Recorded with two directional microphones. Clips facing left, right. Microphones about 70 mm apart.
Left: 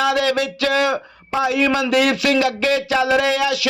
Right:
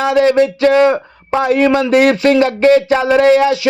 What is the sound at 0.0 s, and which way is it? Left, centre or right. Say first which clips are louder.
Speech: right 7 dB; right.